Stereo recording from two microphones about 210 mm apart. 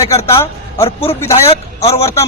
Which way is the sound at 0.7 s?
25° left (ahead or behind).